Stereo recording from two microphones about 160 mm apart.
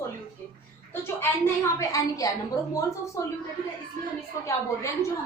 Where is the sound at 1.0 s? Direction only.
15° left (ahead or behind).